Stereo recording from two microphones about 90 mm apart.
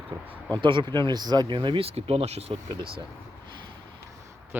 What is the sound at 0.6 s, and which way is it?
Speech, 60° right (ahead or behind).